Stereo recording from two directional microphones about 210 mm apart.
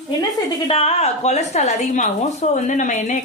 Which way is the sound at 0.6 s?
30° left (ahead or behind).